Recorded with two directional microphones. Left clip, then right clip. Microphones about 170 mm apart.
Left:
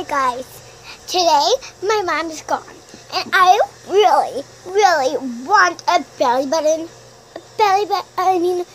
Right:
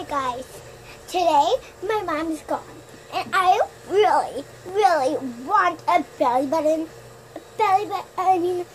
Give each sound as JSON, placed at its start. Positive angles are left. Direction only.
{"t": 0.0, "sound": "a child's voice", "side_deg": 35}
{"t": 3.1, "sound": "a child's voice", "side_deg": 35}